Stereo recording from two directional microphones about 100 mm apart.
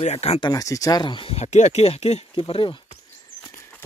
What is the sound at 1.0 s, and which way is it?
Speech, 55° left (ahead or behind).